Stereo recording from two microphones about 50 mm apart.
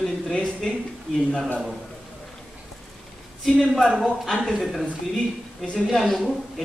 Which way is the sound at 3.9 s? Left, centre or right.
Centre.